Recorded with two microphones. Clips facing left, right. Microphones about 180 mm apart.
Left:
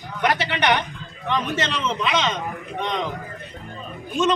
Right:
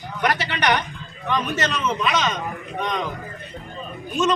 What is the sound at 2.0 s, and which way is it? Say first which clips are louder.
Speech: even; 25° left (ahead or behind).